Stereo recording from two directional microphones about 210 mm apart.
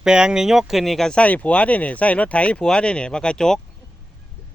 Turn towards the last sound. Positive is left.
turn(degrees=5)  # may be behind; listen again after turning